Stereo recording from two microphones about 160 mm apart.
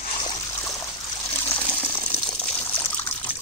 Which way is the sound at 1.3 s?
15° left (ahead or behind).